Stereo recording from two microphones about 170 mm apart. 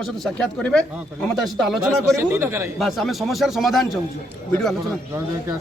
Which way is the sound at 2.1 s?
15° right (ahead or behind).